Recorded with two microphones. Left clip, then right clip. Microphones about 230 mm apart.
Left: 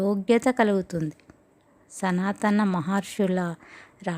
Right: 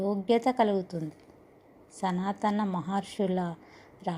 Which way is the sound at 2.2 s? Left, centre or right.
Left.